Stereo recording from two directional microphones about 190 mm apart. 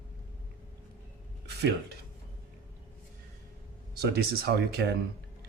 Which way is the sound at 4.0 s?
55° right (ahead or behind).